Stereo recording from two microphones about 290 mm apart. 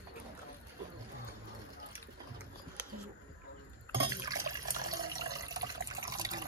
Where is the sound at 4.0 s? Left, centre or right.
Centre.